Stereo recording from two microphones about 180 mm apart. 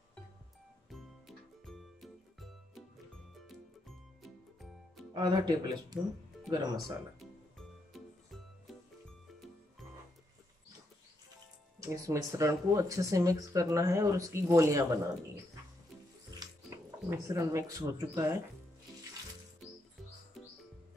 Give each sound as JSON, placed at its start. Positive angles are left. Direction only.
{"t": 0.8, "sound": "music", "side_deg": 0}
{"t": 5.1, "sound": "speech", "side_deg": -25}
{"t": 7.5, "sound": "music", "side_deg": 0}
{"t": 11.8, "sound": "speech", "side_deg": -15}
{"t": 17.3, "sound": "speech", "side_deg": -20}